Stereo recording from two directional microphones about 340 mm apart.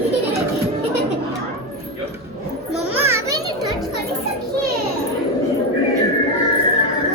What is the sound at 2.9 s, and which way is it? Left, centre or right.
Children playing, centre.